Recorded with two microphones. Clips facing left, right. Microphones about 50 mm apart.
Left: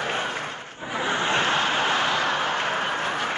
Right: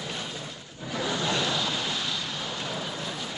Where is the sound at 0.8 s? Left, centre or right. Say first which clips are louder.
Left 4 dB; left.